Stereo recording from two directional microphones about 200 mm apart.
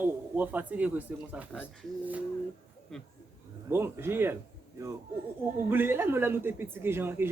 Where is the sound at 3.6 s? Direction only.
10° right (ahead or behind).